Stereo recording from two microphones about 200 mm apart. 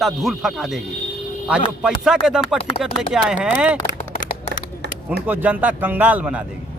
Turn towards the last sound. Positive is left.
turn(degrees=-5)  # may be behind; listen again after turning